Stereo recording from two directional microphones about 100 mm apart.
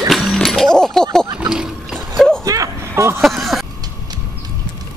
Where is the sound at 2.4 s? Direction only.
35° right (ahead or behind).